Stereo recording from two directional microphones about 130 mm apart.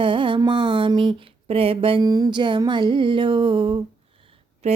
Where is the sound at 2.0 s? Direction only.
30° right (ahead or behind).